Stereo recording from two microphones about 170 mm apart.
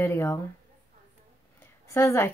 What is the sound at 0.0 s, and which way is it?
Speech, 15° left (ahead or behind).